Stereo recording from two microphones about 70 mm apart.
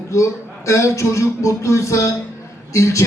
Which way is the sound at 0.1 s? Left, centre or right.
Left.